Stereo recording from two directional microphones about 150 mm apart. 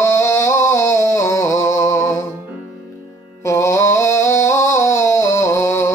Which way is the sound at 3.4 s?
20° left (ahead or behind).